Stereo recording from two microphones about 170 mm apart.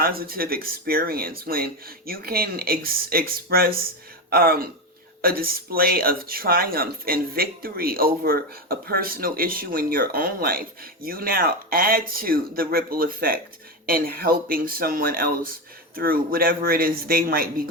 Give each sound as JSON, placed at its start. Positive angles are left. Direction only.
{"t": 0.0, "sound": "speech", "side_deg": -60}